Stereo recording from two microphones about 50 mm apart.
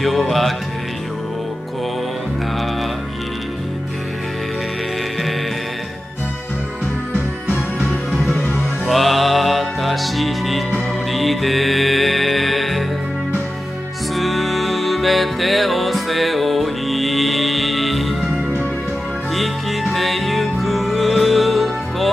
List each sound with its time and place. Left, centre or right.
0.0 s music: centre
7.4 s music: centre
8.4 s music: left
8.8 s music: centre
14.1 s music: centre
19.3 s music: centre